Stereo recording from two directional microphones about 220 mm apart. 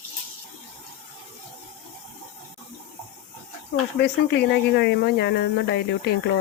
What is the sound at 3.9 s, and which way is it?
Speech, 50° left (ahead or behind).